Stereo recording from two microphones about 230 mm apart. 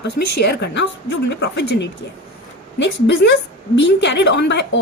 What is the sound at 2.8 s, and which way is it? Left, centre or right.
A woman's voice, left.